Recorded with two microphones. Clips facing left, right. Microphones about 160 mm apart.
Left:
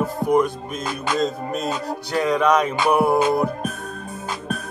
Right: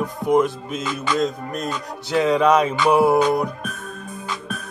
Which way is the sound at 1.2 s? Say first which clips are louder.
Left 2 dB; centre (ahead or behind).